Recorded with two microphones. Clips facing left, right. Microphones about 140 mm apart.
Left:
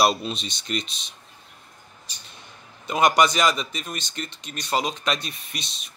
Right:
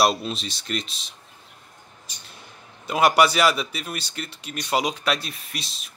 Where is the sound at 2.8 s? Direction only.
5° right (ahead or behind).